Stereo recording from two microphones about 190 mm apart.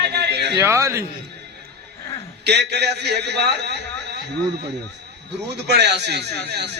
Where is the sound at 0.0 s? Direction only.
60° right (ahead or behind).